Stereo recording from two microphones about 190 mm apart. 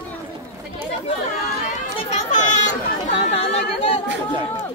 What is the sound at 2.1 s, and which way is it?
Chatter, 40° left (ahead or behind).